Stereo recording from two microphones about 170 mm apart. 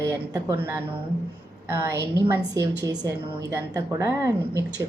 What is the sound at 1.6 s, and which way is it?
A woman's voice, 15° right (ahead or behind).